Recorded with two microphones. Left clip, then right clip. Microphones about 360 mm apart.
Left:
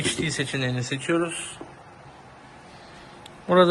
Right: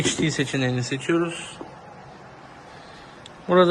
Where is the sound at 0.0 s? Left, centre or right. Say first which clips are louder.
Right 3 dB; centre.